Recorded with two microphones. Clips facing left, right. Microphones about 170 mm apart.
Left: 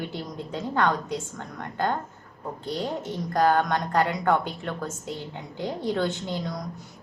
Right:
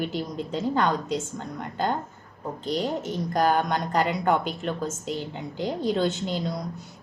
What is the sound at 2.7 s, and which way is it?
Speech, 15° right (ahead or behind).